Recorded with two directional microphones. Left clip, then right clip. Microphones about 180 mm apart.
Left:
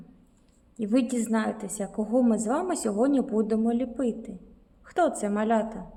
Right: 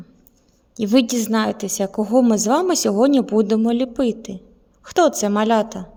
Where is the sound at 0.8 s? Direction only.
55° right (ahead or behind).